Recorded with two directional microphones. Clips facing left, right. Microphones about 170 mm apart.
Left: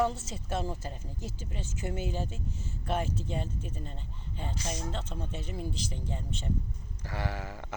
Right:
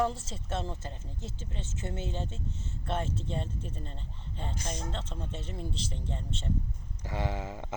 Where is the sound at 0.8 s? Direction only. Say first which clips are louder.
Left 2 dB; 25° right (ahead or behind).